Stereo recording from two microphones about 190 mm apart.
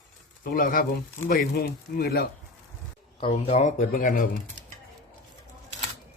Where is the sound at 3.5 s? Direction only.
35° left (ahead or behind).